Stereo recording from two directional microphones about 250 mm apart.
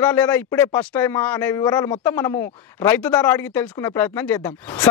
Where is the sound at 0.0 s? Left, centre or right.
Centre.